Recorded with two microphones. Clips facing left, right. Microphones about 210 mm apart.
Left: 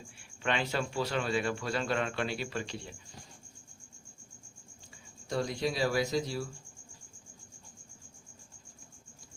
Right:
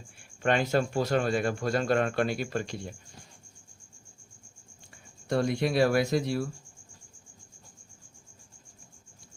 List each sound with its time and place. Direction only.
0.2 s speech: 45° right (ahead or behind)
5.3 s speech: 60° right (ahead or behind)